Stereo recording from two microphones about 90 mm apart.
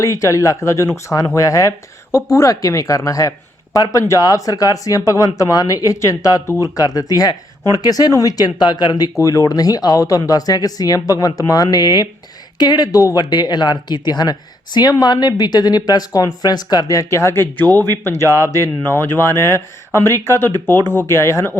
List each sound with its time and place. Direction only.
0.0 s speech: 35° left (ahead or behind); by 9.0 s 55° left (ahead or behind)
9.1 s speech: 35° left (ahead or behind)